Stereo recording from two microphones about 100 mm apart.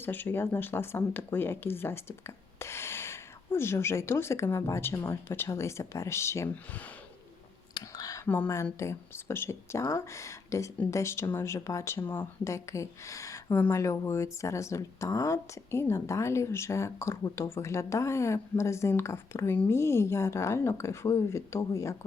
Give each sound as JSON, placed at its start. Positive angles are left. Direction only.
{"t": 0.0, "sound": "speech", "side_deg": 20}
{"t": 7.7, "sound": "whispering", "side_deg": 45}
{"t": 8.8, "sound": "speech", "side_deg": 30}